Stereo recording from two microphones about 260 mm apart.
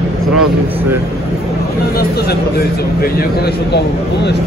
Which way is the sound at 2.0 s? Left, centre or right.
Left.